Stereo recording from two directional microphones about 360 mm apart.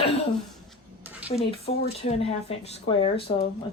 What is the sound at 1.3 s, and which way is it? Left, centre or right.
Speech, centre.